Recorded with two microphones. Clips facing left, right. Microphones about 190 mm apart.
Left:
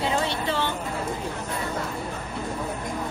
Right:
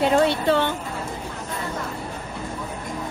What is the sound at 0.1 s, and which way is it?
Speech, 55° right (ahead or behind).